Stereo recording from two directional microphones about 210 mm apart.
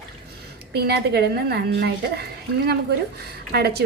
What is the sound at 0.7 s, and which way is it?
A woman's voice, 50° right (ahead or behind).